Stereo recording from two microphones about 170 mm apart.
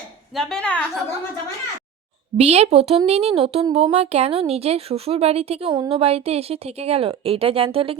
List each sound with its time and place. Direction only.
0.3 s a woman's voice: 5° left (ahead or behind)
2.4 s a woman's voice: 40° right (ahead or behind)